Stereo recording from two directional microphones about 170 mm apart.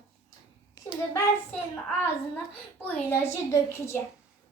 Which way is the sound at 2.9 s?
15° left (ahead or behind).